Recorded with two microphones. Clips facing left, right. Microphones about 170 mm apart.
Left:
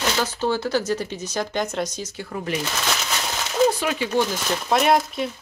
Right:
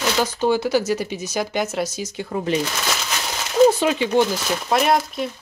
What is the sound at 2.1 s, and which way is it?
Speech, 25° right (ahead or behind).